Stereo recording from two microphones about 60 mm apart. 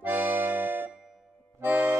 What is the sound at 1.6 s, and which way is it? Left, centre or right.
Music, right.